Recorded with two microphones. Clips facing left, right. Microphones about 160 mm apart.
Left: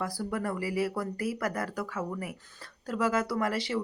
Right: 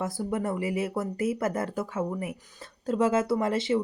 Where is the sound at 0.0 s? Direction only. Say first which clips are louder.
Right 3 dB; 25° right (ahead or behind).